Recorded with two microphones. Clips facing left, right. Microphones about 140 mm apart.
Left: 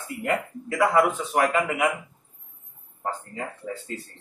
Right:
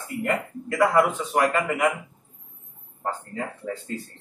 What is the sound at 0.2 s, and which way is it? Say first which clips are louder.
A man's voice: even; 5° left (ahead or behind).